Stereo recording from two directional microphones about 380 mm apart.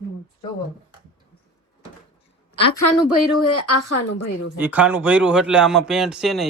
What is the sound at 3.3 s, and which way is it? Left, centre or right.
Speech, left.